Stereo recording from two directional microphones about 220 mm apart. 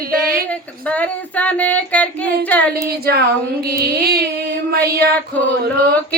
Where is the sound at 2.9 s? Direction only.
45° right (ahead or behind).